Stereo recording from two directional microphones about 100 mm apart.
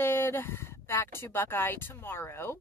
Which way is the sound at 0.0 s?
25° left (ahead or behind).